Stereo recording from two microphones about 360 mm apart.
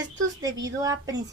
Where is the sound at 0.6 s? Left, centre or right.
Centre.